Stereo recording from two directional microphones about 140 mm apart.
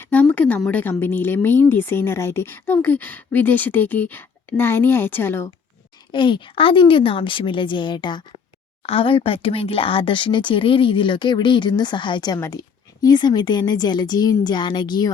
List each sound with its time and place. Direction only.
0.0 s a sound: 10° left (ahead or behind)
0.7 s speech: 15° left (ahead or behind)
6.1 s speech: 35° left (ahead or behind)